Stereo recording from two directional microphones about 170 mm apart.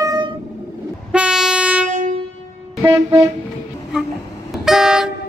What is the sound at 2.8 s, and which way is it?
Vehicle, 15° right (ahead or behind).